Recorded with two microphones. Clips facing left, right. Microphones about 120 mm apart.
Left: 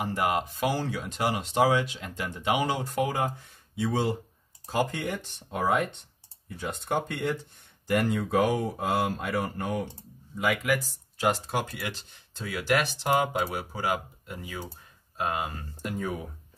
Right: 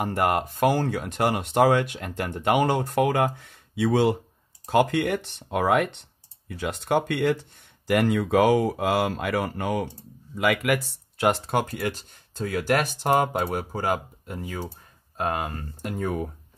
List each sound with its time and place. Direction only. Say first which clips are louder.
0.0 s speech: right 4 dB; 55° right (ahead or behind); by 6.0 s 70° right (ahead or behind)
6.5 s speech: right 5 dB; 90° right
10.3 s speech: right 4 dB; 70° right (ahead or behind); by 16.1 s 55° right (ahead or behind)